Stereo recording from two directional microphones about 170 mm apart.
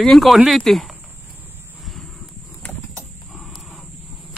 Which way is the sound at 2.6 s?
5° left (ahead or behind).